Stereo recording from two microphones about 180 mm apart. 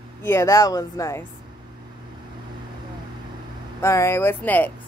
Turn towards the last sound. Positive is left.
turn(degrees=10)  # may be behind; listen again after turning